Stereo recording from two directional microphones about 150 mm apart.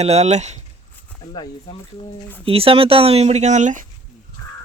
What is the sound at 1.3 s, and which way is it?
Speech, 30° left (ahead or behind).